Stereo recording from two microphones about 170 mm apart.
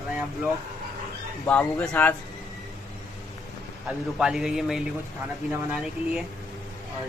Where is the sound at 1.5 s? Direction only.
10° left (ahead or behind).